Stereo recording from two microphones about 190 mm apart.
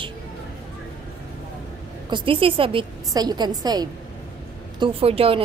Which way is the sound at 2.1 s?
25° right (ahead or behind).